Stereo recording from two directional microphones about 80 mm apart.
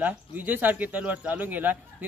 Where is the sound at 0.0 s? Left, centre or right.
Right.